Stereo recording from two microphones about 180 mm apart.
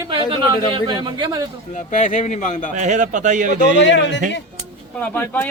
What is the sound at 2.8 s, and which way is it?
Speech, 45° right (ahead or behind).